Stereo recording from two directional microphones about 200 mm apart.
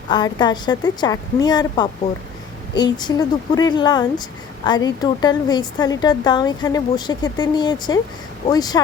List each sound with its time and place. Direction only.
0.1 s speech: 20° left (ahead or behind)